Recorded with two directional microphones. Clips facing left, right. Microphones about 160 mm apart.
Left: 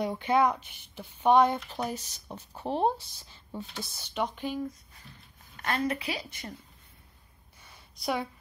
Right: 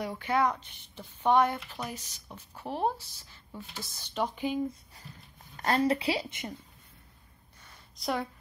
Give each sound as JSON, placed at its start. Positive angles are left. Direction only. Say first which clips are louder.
{"t": 0.0, "sound": "speech", "louder": "left 3 dB", "side_deg": 20}
{"t": 1.8, "sound": "a woman's voice", "louder": "left 5 dB", "side_deg": 30}
{"t": 3.9, "sound": "speech", "louder": "even", "side_deg": 5}
{"t": 4.4, "sound": "speech", "louder": "right 2 dB", "side_deg": -15}
{"t": 5.1, "sound": "dog", "louder": "right 3 dB", "side_deg": -5}
{"t": 5.6, "sound": "a woman's voice", "louder": "right 4 dB", "side_deg": -35}
{"t": 7.6, "sound": "a sound", "louder": "left 1 dB", "side_deg": 5}